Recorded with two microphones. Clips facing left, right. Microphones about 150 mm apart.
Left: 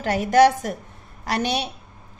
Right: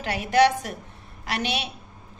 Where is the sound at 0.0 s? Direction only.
45° left (ahead or behind).